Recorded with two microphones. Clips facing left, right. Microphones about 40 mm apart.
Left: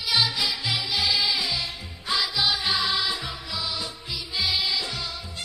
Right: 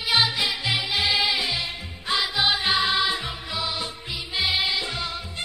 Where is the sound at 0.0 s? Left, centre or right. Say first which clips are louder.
Right 2 dB; right.